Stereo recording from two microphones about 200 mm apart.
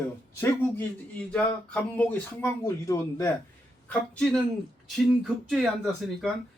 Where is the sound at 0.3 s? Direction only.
10° left (ahead or behind).